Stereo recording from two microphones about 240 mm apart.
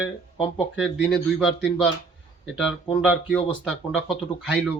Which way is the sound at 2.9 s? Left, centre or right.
Centre.